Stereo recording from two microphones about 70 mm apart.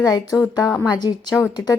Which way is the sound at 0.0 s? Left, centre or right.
Left.